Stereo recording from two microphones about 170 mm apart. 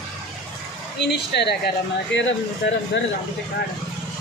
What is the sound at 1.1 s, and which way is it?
Speech, 80° left.